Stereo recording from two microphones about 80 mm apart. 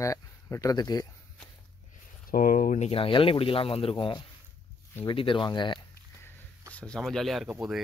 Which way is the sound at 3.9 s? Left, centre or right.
Left.